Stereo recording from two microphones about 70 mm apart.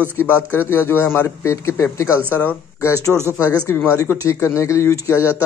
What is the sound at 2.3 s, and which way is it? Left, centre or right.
Speech, left.